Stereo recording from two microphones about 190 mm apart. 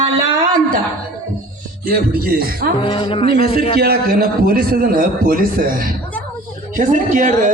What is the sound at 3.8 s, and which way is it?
A man's voice, 55° right (ahead or behind).